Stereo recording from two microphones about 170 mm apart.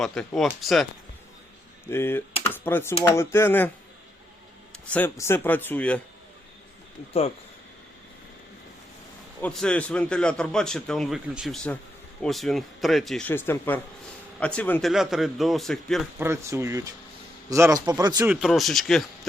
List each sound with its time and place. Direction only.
0.0 s a man's voice: 5° left (ahead or behind)
1.9 s speech: 15° left (ahead or behind)
4.9 s speech: 10° left (ahead or behind)
9.4 s a man's voice: 5° left (ahead or behind)
16.1 s speech: 15° right (ahead or behind)
18.3 s a man's voice: 5° right (ahead or behind)